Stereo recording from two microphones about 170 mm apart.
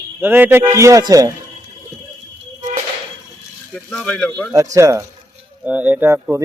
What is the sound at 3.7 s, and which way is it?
Speech, 5° left (ahead or behind).